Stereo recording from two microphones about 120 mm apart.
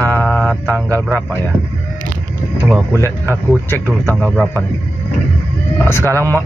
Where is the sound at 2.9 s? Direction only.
20° left (ahead or behind).